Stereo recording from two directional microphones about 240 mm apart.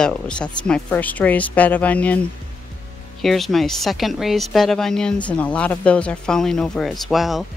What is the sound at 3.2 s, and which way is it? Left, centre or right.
Speech, centre.